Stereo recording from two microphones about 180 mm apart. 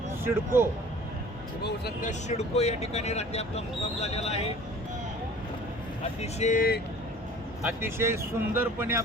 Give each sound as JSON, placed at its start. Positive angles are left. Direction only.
{"t": 0.3, "sound": "speech", "side_deg": -15}
{"t": 2.0, "sound": "speech", "side_deg": 40}
{"t": 6.4, "sound": "speech", "side_deg": 45}
{"t": 7.6, "sound": "speech", "side_deg": -10}